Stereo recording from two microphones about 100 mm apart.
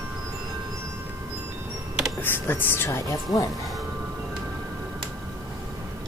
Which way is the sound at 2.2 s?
20° left (ahead or behind).